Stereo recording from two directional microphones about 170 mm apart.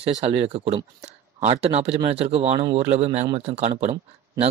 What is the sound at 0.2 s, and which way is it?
A man's voice, 40° right (ahead or behind).